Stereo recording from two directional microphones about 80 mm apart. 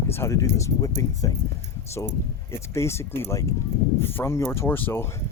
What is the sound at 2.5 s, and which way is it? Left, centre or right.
Speech, left.